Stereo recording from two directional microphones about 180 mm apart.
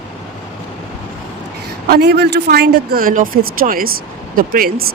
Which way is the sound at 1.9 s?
65° right (ahead or behind).